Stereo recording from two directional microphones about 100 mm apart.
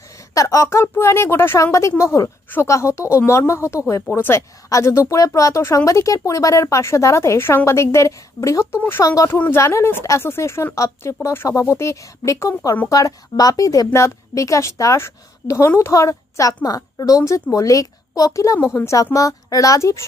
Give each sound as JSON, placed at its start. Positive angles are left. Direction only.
{"t": 0.3, "sound": "a woman's voice", "side_deg": 30}